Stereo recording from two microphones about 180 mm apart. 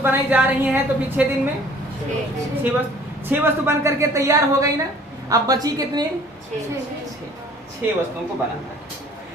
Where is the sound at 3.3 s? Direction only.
15° right (ahead or behind).